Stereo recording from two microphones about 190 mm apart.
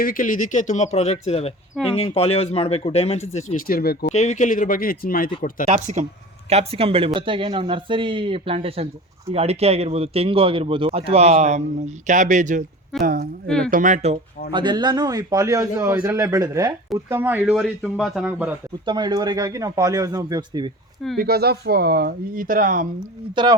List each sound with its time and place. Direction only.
0.0 s speech: 45° left (ahead or behind)
4.1 s speech: 40° left (ahead or behind)
5.6 s speech: 35° right (ahead or behind)
13.0 s speech: 50° right (ahead or behind); by 14.2 s 35° right (ahead or behind)
14.5 s speech: 25° right (ahead or behind)
17.5 s speech: centre (ahead or behind)
18.9 s speech: 20° right (ahead or behind)
21.2 s speech: 55° right (ahead or behind)
23.3 s speech: 25° right (ahead or behind)